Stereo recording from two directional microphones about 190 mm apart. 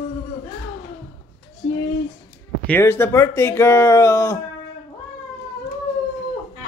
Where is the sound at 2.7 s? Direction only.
10° left (ahead or behind).